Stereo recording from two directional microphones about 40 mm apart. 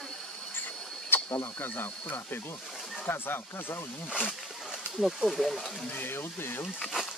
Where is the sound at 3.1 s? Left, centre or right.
Left.